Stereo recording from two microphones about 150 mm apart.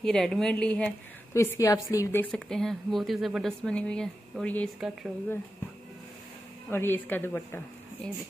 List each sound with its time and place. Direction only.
0.0 s speech: 5° left (ahead or behind)
1.3 s speech: 20° left (ahead or behind)
2.3 s speech: 5° left (ahead or behind)
4.7 s speech: 5° right (ahead or behind)
6.7 s speech: 15° left (ahead or behind)